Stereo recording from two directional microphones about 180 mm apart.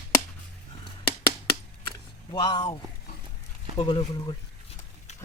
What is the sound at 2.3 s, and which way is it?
Speech, 25° left (ahead or behind).